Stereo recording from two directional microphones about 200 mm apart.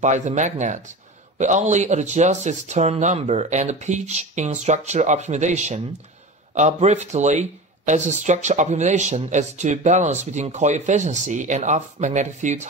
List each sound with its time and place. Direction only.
0.0 s speech: 35° right (ahead or behind)